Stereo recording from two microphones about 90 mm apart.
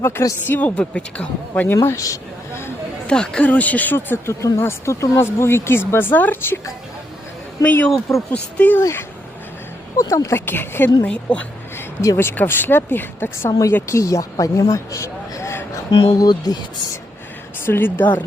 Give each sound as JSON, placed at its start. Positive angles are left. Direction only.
{"t": 0.0, "sound": "speech", "side_deg": 30}
{"t": 0.8, "sound": "speech", "side_deg": 10}
{"t": 1.7, "sound": "a sound", "side_deg": 30}
{"t": 3.1, "sound": "speech", "side_deg": 10}
{"t": 7.6, "sound": "speech", "side_deg": 20}
{"t": 8.8, "sound": "speech", "side_deg": 30}
{"t": 11.0, "sound": "speech", "side_deg": 15}
{"t": 13.5, "sound": "speech", "side_deg": 35}
{"t": 15.9, "sound": "speech", "side_deg": 80}
{"t": 16.1, "sound": "speech", "side_deg": 45}
{"t": 17.6, "sound": "speech", "side_deg": 25}